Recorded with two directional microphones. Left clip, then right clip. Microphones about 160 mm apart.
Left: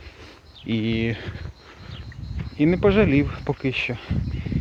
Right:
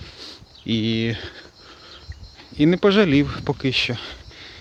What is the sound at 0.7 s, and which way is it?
Speech, 30° right (ahead or behind).